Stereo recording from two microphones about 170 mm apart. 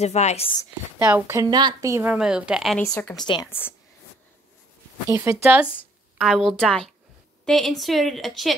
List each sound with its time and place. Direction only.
0.0 s speech: 40° left (ahead or behind)
0.9 s speech: 15° right (ahead or behind)
2.1 s a woman's voice: 5° right (ahead or behind)
2.8 s a woman's voice: 15° left (ahead or behind)
5.1 s speech: 15° right (ahead or behind)
6.1 s a woman's voice: centre (ahead or behind)